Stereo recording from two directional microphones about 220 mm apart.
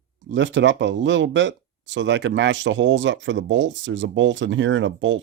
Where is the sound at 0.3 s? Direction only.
55° right (ahead or behind).